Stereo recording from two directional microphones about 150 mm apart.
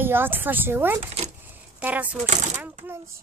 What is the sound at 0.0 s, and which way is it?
Speech, 15° right (ahead or behind).